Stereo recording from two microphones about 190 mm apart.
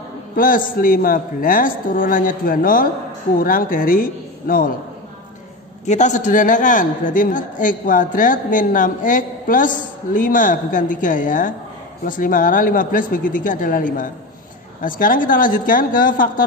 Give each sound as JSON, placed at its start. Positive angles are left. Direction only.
{"t": 0.7, "sound": "a man's voice", "side_deg": 50}
{"t": 5.9, "sound": "a man's voice", "side_deg": 40}